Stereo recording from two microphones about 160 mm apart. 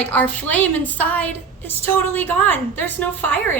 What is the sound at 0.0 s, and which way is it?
A woman's voice, 10° left (ahead or behind).